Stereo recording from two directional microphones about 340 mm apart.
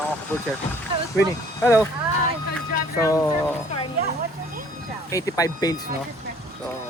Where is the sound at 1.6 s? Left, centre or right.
Centre.